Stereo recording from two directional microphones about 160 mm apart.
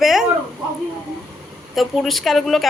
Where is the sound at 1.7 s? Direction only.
Centre (ahead or behind).